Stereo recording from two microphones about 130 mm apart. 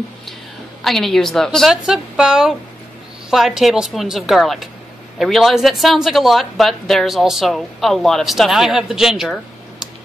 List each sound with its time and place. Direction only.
0.8 s speech: centre (ahead or behind)